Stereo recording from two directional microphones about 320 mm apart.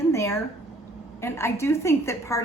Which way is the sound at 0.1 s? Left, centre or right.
Centre.